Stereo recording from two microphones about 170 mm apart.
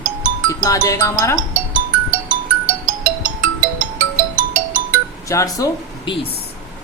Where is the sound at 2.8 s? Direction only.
55° right (ahead or behind).